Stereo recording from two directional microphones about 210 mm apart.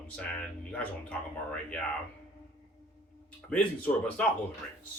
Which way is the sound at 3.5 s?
5° left (ahead or behind).